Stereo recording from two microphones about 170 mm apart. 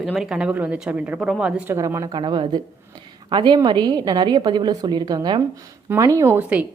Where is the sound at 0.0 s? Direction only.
Centre (ahead or behind).